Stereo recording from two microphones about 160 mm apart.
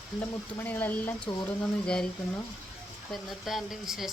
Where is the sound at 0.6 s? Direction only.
10° left (ahead or behind).